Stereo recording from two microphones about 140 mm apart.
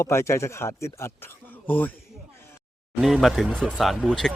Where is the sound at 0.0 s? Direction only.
20° left (ahead or behind).